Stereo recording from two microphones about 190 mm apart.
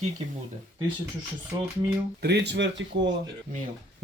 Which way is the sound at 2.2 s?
65° right (ahead or behind).